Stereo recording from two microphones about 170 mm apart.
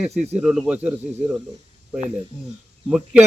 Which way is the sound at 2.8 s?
5° right (ahead or behind).